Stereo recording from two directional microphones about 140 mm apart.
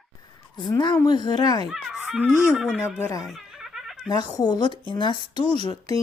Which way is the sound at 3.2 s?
Centre (ahead or behind).